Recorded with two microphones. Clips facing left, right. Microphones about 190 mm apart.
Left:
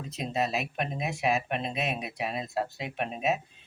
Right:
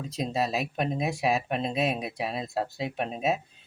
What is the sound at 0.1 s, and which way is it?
Speech, 35° right (ahead or behind).